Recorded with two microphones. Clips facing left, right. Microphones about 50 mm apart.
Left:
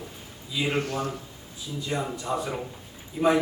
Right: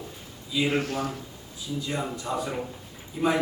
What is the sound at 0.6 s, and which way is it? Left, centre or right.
A man's voice, centre.